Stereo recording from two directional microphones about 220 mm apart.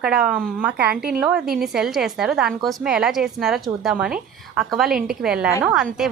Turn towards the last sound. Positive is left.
turn(degrees=0)  # may be behind; listen again after turning